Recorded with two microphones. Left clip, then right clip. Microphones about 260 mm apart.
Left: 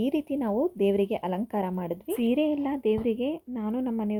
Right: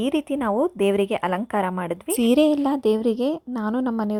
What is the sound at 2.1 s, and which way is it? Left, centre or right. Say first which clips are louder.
Speech: right 8 dB; right.